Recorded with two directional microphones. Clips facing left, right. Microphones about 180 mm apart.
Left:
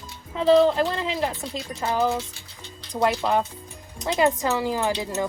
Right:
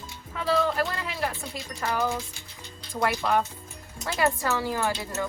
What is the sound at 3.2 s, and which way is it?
Speech, 20° left (ahead or behind).